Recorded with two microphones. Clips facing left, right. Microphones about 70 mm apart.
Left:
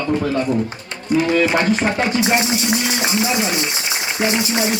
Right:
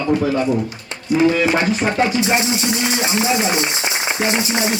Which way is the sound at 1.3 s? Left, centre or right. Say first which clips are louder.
Even; centre.